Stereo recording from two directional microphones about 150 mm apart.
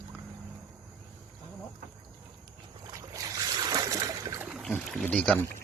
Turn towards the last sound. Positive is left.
turn(degrees=10)  # may be behind; listen again after turning